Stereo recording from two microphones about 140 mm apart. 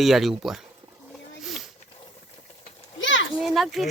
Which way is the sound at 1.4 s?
Centre (ahead or behind).